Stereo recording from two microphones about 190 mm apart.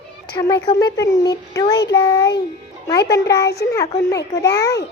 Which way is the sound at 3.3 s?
60° left (ahead or behind).